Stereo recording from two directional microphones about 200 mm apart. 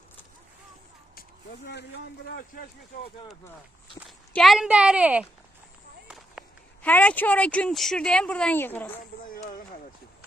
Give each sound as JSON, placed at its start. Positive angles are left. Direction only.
{"t": 2.2, "sound": "speech", "side_deg": 50}
{"t": 4.3, "sound": "a woman's voice", "side_deg": 0}
{"t": 6.1, "sound": "run", "side_deg": 0}
{"t": 6.8, "sound": "speech", "side_deg": 5}
{"t": 9.2, "sound": "a sound", "side_deg": 45}